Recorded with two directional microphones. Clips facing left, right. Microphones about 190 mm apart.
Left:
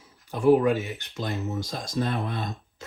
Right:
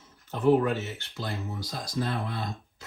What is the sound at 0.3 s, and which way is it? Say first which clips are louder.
Speech: left 3 dB; 10° left (ahead or behind).